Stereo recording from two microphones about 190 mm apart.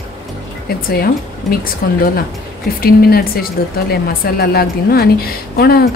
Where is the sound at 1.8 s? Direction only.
55° left (ahead or behind).